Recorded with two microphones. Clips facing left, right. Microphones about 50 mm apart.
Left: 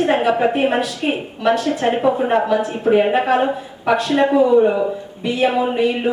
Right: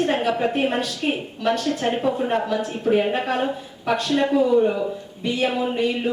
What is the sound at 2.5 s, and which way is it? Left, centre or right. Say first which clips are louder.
Speech: left 6 dB; centre.